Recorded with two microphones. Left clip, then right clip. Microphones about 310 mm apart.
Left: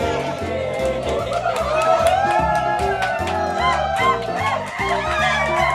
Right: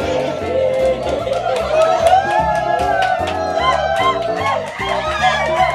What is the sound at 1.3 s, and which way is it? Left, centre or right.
Music, centre.